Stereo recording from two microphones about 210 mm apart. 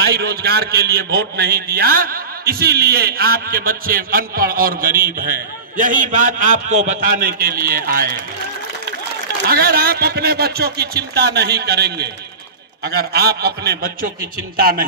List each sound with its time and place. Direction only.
0.0 s a man's voice: 50° right (ahead or behind)
9.5 s a man's voice: 45° right (ahead or behind)